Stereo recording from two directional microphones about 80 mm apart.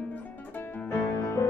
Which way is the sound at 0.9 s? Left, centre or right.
Left.